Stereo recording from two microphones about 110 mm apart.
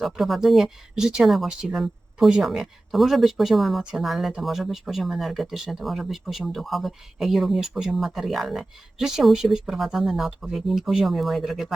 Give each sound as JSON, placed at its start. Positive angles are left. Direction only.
{"t": 0.0, "sound": "speech", "side_deg": 0}